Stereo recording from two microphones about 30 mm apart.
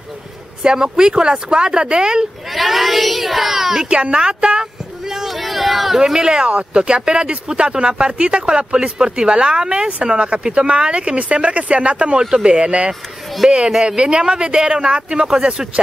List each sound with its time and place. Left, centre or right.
0.6 s speech: right
2.5 s speech: centre
3.9 s speech: right
4.2 s speech: right
5.3 s speech: centre
5.9 s speech: centre; by 8.6 s right
8.7 s speech: right
11.1 s speech: right
13.4 s speech: centre
13.8 s speech: right